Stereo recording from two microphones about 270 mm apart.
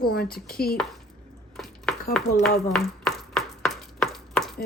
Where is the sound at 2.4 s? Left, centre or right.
Centre.